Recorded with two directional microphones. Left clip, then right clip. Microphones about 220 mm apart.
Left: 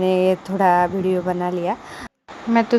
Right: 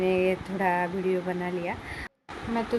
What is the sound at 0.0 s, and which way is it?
A woman's voice, 30° left (ahead or behind).